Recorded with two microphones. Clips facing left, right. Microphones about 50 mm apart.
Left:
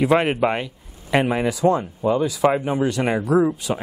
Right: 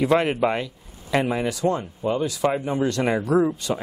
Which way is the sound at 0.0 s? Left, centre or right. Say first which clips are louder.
Left 2 dB; centre.